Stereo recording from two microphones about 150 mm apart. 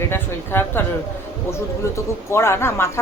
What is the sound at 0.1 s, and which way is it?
Speech, 15° left (ahead or behind).